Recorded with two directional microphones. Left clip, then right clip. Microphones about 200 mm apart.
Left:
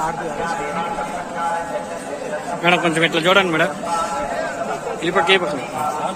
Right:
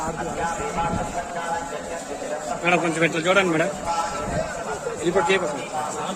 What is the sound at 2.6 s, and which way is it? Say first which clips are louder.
A man's voice: left 5 dB; 5° right (ahead or behind).